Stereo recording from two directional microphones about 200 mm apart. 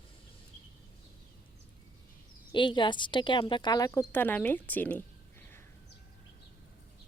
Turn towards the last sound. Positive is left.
turn(degrees=10)  # may be behind; listen again after turning